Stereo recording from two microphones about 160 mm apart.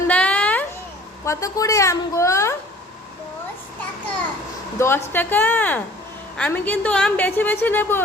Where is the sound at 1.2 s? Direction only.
20° left (ahead or behind).